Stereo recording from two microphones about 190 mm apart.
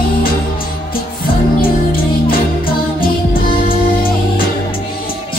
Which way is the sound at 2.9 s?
50° left (ahead or behind).